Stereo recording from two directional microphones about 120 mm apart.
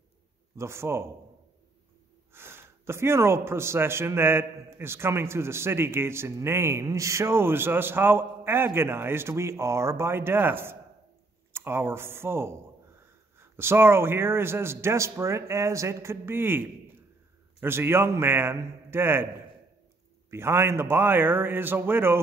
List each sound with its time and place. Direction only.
0.6 s speech: 20° right (ahead or behind)
2.3 s speech: 20° right (ahead or behind)
20.2 s speech: 20° right (ahead or behind)